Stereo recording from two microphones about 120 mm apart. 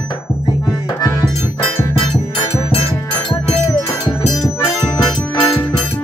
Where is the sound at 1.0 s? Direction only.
25° left (ahead or behind).